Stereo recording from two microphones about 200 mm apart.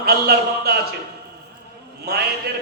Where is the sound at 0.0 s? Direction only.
50° right (ahead or behind).